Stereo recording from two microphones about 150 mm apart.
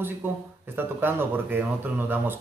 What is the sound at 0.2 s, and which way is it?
Speech, 10° right (ahead or behind).